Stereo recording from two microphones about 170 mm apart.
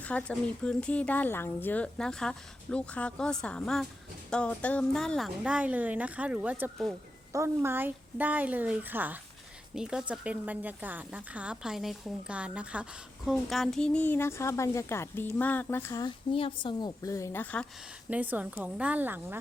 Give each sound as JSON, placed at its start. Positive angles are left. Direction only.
{"t": 0.0, "sound": "a woman's voice", "side_deg": 10}
{"t": 18.1, "sound": "a woman's voice", "side_deg": -10}